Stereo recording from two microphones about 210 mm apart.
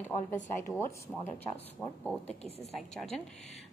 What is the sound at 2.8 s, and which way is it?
Speech, centre (ahead or behind).